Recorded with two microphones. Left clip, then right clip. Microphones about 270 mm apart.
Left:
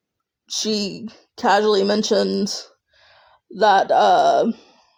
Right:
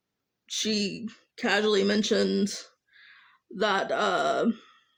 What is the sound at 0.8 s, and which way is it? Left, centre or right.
Speech, centre.